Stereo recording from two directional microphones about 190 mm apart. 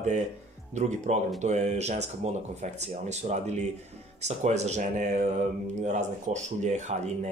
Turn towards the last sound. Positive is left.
turn(degrees=-35)  # may be behind; listen again after turning